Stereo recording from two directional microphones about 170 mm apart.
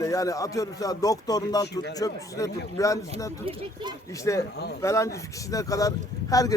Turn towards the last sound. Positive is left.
turn(degrees=20)  # may be behind; listen again after turning